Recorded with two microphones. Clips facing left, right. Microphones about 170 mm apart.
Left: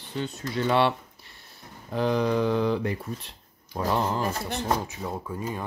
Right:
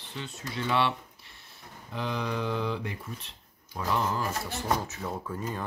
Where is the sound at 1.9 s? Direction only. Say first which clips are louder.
Left 8 dB; 40° left (ahead or behind).